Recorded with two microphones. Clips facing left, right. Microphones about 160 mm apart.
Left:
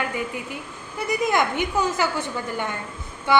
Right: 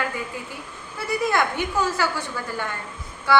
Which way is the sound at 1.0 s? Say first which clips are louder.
Left 1 dB; 20° left (ahead or behind).